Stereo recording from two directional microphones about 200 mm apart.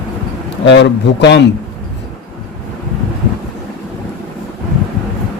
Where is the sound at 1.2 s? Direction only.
60° left (ahead or behind).